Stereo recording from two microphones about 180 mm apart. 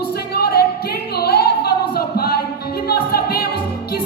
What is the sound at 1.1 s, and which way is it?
Singing, 60° left (ahead or behind).